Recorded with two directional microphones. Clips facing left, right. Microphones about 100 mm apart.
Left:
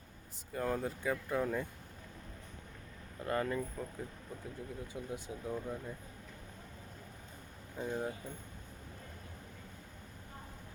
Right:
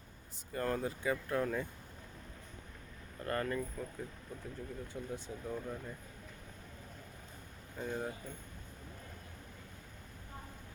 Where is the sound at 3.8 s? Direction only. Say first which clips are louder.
Even; 25° left (ahead or behind).